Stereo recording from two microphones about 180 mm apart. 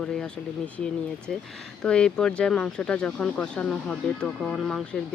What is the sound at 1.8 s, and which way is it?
Speech, 5° left (ahead or behind).